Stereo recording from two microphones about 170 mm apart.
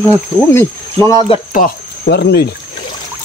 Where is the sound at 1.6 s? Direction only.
75° left (ahead or behind).